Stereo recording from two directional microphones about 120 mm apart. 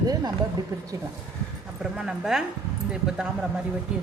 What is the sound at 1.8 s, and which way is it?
Speech, 5° right (ahead or behind).